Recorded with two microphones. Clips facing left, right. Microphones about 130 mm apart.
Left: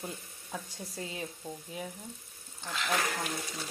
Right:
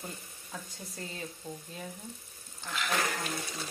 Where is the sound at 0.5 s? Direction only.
10° left (ahead or behind).